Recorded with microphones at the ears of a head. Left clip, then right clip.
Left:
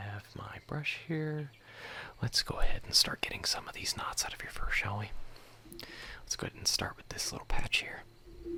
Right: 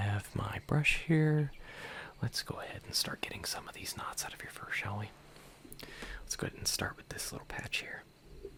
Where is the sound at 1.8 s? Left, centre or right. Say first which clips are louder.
Left 2 dB; centre.